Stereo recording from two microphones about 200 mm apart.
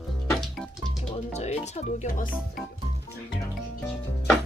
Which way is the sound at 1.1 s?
35° left (ahead or behind).